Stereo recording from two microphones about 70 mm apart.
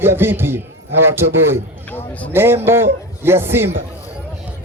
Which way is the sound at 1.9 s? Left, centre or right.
Left.